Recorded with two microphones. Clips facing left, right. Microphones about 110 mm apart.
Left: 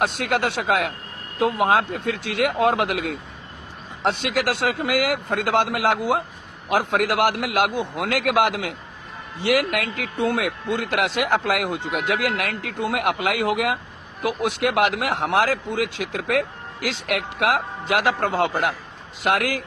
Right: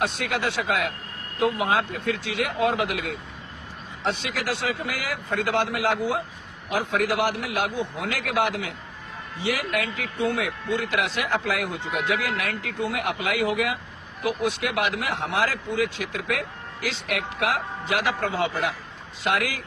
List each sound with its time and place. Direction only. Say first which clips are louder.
0.0 s speech: left 4 dB; 55° left (ahead or behind)
4.2 s a man's voice: left 6 dB; 60° left (ahead or behind)